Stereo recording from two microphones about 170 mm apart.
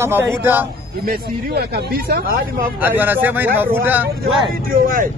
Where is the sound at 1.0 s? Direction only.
65° right (ahead or behind).